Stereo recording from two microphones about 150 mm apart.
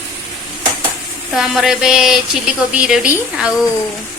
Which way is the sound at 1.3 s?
Centre (ahead or behind).